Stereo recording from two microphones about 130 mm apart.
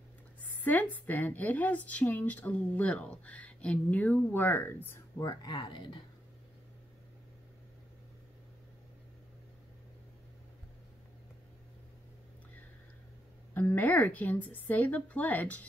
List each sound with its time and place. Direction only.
0.4 s a woman's voice: 10° left (ahead or behind)
5.4 s speech: 35° left (ahead or behind)
13.6 s a woman's voice: 15° left (ahead or behind)